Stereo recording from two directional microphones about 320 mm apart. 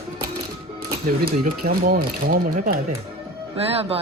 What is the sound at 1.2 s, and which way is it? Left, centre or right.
Speech, right.